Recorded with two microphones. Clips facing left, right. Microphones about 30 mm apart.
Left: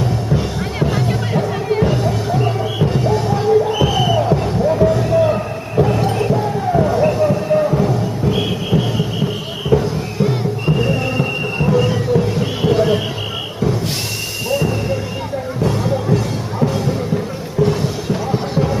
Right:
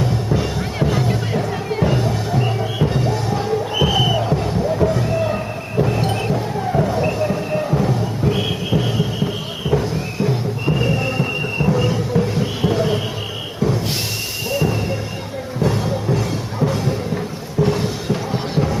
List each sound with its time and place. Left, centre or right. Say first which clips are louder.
0.3 s music: left 1 dB; centre
3.7 s a sound: left 2 dB; centre
4.2 s music: left 4 dB; centre
5.0 s a sound: left 5 dB; centre
6.0 s music: left 3 dB; centre
6.3 s music: left 4 dB; centre
9.7 s music: left 4 dB; centre
10.7 s music: left 1 dB; centre
12.1 s a sound: left 2 dB; centre
14.5 s music: left 2 dB; centre